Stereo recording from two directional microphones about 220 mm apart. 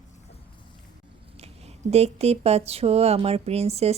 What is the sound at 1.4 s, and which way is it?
Speech, 30° right (ahead or behind).